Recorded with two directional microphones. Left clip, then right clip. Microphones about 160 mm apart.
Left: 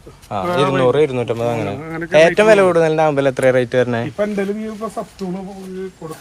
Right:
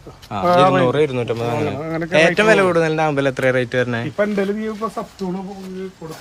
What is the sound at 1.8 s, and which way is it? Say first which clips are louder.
Speech: right 2 dB; 50° right (ahead or behind).